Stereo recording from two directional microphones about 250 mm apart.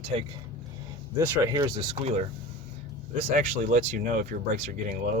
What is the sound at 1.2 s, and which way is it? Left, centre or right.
Speech, centre.